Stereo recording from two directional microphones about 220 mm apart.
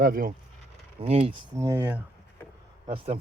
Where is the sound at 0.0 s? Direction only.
40° right (ahead or behind).